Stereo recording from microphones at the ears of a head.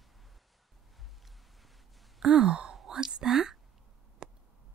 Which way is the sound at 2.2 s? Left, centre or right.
Right.